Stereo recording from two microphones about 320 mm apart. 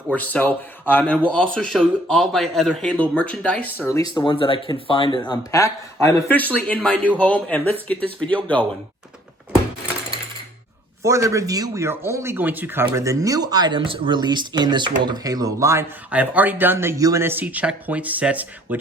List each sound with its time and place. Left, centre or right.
0.1 s a man's voice: centre
11.0 s speech: centre